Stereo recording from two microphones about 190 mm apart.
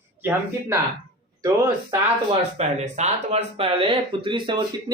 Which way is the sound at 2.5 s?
35° right (ahead or behind).